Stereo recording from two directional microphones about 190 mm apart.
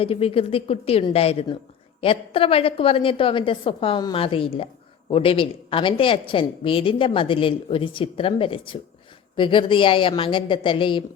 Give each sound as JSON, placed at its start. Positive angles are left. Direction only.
{"t": 0.0, "sound": "a woman's voice", "side_deg": 30}